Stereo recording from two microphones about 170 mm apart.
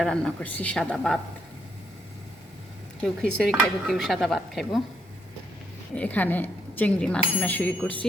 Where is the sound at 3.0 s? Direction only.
5° left (ahead or behind).